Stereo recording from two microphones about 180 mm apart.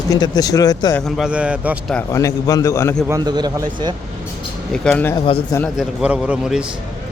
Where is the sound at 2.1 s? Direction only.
20° left (ahead or behind).